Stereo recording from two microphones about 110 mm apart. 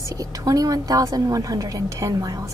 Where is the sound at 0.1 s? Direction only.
35° right (ahead or behind).